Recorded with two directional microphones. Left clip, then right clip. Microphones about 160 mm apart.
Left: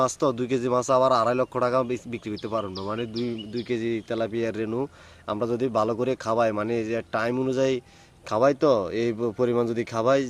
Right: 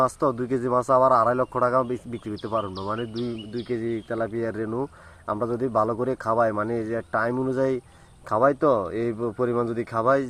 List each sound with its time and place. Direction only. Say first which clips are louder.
0.3 s speech: right 1 dB; 35° left (ahead or behind)
3.1 s a man's voice: left 1 dB; 35° left (ahead or behind)